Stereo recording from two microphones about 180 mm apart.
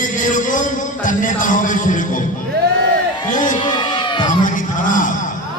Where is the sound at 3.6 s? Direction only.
25° left (ahead or behind).